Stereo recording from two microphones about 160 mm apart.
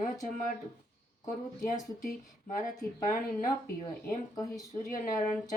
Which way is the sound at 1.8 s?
55° left (ahead or behind).